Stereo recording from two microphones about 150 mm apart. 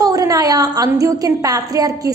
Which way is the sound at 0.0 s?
25° right (ahead or behind).